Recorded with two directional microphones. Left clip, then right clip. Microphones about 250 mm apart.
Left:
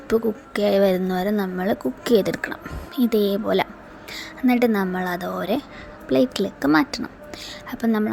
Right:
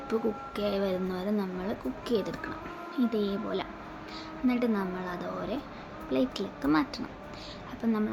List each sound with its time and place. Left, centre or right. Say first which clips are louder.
0.1 s speech: left 10 dB; left